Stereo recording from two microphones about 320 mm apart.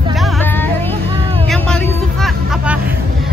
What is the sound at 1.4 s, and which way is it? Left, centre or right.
Vehicle, centre.